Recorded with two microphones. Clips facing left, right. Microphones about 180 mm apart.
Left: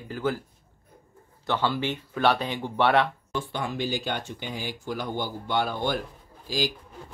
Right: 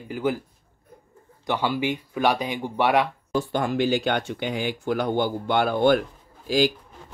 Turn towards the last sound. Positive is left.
turn(degrees=-60)  # may be behind; listen again after turning